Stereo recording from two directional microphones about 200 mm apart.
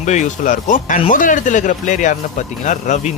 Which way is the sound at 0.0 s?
35° left (ahead or behind).